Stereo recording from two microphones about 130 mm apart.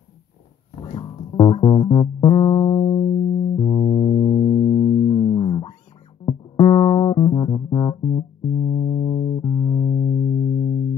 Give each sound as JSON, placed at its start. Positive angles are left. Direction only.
{"t": 0.8, "sound": "music", "side_deg": 40}